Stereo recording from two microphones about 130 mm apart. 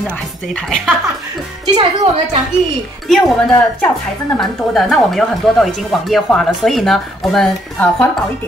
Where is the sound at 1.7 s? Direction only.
45° right (ahead or behind).